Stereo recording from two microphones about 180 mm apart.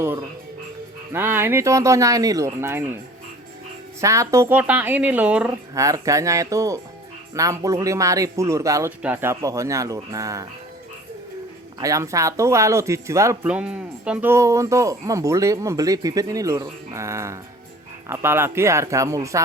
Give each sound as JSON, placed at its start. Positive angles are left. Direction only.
{"t": 0.0, "sound": "speech", "side_deg": -15}
{"t": 4.0, "sound": "speech", "side_deg": -15}
{"t": 5.8, "sound": "speech", "side_deg": -20}
{"t": 11.8, "sound": "speech", "side_deg": -20}